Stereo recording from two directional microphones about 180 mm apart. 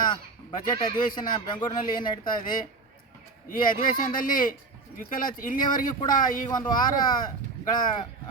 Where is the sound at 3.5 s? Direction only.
50° left (ahead or behind).